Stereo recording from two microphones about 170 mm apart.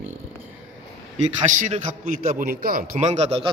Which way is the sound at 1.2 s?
45° right (ahead or behind).